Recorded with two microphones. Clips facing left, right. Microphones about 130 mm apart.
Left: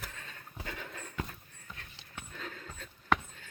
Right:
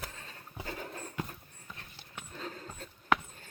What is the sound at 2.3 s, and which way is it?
Horse, 30° right (ahead or behind).